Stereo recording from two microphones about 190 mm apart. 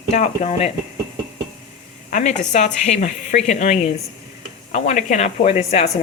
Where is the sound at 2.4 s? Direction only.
40° left (ahead or behind).